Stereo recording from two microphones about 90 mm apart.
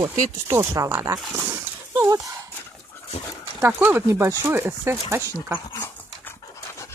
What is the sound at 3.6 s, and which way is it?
Speech, 25° right (ahead or behind).